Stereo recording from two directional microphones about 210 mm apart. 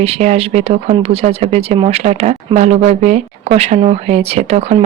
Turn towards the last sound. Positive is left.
turn(degrees=-30)  # may be behind; listen again after turning